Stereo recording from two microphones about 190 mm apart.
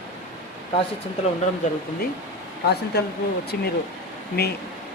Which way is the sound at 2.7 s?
60° left (ahead or behind).